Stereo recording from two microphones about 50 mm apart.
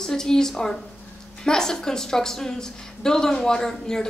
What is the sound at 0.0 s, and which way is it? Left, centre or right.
A woman's voice, centre.